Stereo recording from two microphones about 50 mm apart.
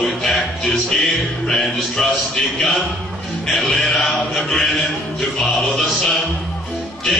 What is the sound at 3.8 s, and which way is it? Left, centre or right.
Mantra, centre.